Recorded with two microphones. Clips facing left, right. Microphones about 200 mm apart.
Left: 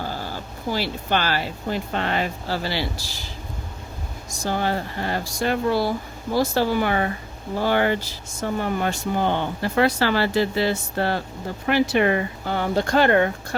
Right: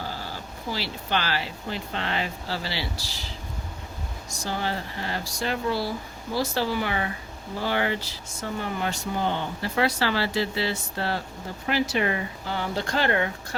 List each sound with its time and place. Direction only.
0.7 s speech: 50° left (ahead or behind)
4.4 s speech: 50° left (ahead or behind)